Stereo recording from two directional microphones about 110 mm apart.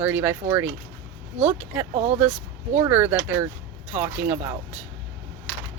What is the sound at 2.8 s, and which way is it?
Speech, 20° right (ahead or behind).